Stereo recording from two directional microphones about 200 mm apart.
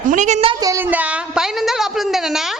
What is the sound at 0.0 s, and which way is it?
Speech, 40° right (ahead or behind).